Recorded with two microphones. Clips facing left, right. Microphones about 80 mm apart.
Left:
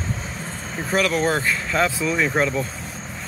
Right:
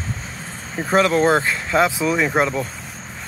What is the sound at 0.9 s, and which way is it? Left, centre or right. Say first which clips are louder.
Speech: right 5 dB; right.